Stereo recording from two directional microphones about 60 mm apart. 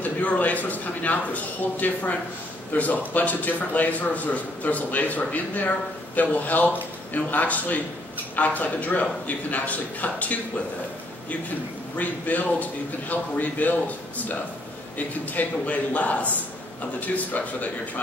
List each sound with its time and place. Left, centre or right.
0.0 s a man's voice: left
12.0 s a man's voice: left